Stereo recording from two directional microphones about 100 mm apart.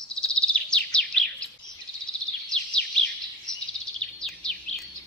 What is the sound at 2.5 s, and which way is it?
Bird vocalization, 10° left (ahead or behind).